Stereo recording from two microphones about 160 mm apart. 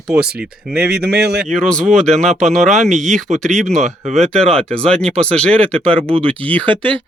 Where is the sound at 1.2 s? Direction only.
90° right.